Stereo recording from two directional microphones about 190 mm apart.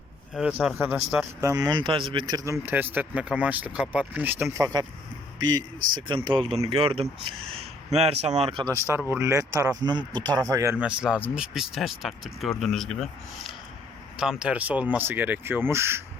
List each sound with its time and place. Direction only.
0.3 s speech: 5° right (ahead or behind)
1.4 s speech: 15° right (ahead or behind)
9.1 s speech: 15° right (ahead or behind)